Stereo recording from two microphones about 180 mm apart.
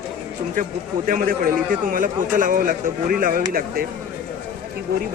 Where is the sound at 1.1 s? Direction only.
50° right (ahead or behind).